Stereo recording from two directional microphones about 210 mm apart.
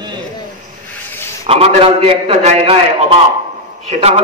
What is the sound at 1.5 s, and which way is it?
A man's voice, 25° right (ahead or behind).